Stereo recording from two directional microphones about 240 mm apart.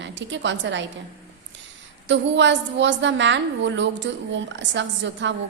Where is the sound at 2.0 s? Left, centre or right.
Right.